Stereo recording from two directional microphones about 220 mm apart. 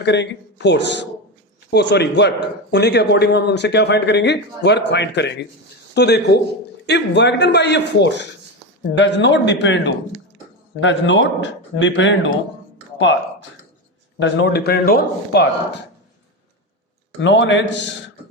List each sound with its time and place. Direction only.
0.0 s a man's voice: 50° left (ahead or behind)
14.2 s a man's voice: 50° left (ahead or behind)
17.2 s speech: 55° left (ahead or behind)